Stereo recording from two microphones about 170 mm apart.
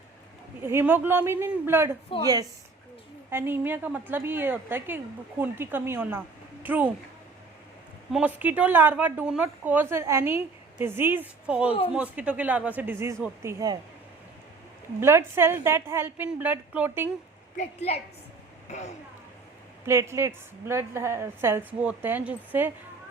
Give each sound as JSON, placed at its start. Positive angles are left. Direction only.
{"t": 0.6, "sound": "a woman's voice", "side_deg": -15}
{"t": 8.1, "sound": "speech", "side_deg": -10}
{"t": 15.0, "sound": "speech", "side_deg": -15}
{"t": 17.6, "sound": "a woman's voice", "side_deg": 40}
{"t": 19.8, "sound": "speech", "side_deg": -15}